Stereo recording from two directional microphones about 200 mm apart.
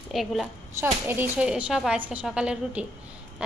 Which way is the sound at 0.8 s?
10° right (ahead or behind).